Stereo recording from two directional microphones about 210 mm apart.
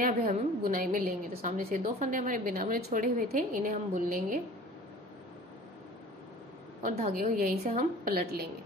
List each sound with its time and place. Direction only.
0.0 s a woman's voice: 40° right (ahead or behind)
6.8 s a woman's voice: 35° right (ahead or behind)